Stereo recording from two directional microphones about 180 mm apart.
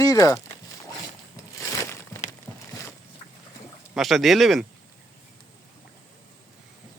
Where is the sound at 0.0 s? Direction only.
20° left (ahead or behind).